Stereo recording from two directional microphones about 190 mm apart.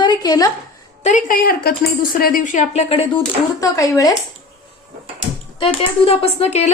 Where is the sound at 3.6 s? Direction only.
20° left (ahead or behind).